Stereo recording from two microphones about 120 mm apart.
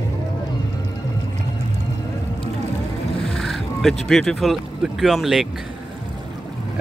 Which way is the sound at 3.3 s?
Centre (ahead or behind).